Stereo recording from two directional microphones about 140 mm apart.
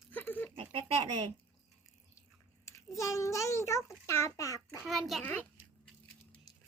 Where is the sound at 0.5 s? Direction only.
40° right (ahead or behind).